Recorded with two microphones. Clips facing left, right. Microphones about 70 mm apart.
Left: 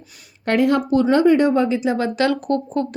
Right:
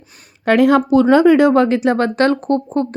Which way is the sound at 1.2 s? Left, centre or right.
Right.